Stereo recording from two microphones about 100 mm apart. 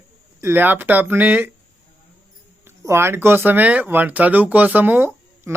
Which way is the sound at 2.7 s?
25° right (ahead or behind).